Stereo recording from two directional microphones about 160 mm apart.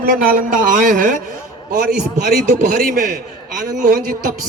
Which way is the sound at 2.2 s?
65° right (ahead or behind).